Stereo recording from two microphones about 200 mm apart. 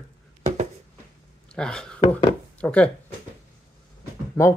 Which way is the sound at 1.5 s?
5° left (ahead or behind).